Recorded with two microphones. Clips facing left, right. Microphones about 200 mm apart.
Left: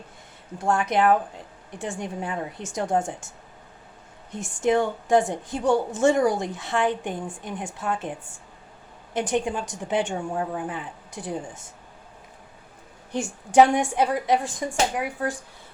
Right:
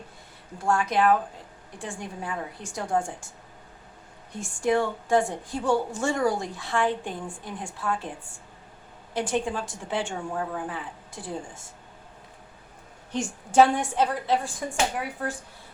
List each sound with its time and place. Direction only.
0.6 s a woman's voice: 20° left (ahead or behind)
9.1 s a woman's voice: 20° left (ahead or behind)
13.5 s a woman's voice: 15° left (ahead or behind)